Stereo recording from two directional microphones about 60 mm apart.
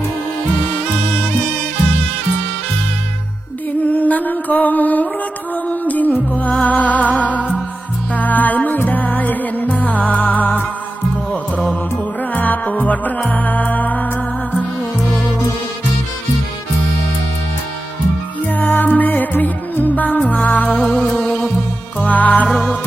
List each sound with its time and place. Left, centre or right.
3.8 s music: left
12.3 s music: left
18.4 s music: left
22.4 s music: centre